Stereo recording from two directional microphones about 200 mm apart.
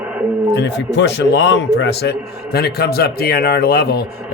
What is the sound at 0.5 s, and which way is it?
A man's voice, 60° left (ahead or behind).